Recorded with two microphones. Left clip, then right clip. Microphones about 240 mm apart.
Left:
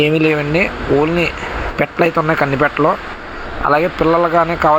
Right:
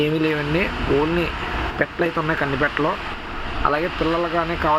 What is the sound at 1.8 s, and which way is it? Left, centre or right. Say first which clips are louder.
Speech: left 8 dB; centre.